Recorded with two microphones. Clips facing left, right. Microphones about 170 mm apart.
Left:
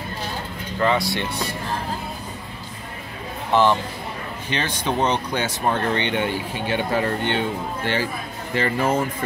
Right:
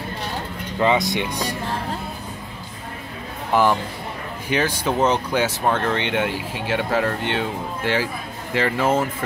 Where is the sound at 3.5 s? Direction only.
10° right (ahead or behind).